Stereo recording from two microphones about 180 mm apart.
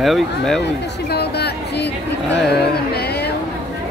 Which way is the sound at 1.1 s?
65° left (ahead or behind).